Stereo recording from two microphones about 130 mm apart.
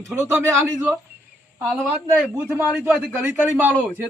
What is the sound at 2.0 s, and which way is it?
Speech, 15° right (ahead or behind).